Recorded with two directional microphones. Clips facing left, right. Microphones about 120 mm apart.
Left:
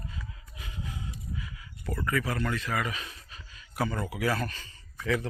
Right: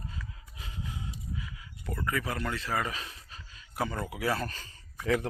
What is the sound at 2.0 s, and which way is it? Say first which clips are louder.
Speech: left 2 dB; 20° right (ahead or behind).